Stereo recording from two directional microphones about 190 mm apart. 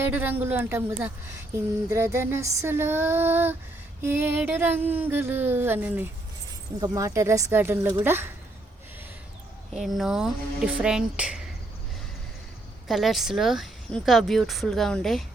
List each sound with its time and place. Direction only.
0.0 s a sound: 10° right (ahead or behind)
9.8 s speech: centre (ahead or behind)
12.9 s speech: centre (ahead or behind)